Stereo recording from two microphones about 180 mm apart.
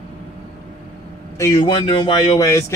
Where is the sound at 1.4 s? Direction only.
20° left (ahead or behind).